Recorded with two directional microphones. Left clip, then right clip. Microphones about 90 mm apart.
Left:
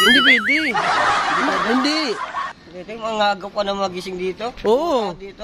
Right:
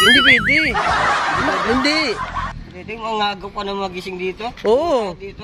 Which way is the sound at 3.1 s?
45° left (ahead or behind).